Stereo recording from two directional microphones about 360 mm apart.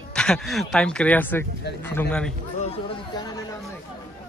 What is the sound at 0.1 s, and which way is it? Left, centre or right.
Speech, centre.